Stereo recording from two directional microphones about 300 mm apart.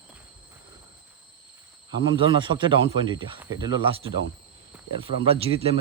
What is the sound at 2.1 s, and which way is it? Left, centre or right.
Speech, centre.